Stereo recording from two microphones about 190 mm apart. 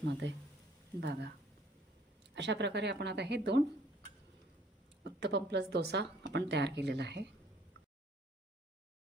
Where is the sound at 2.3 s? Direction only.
65° right (ahead or behind).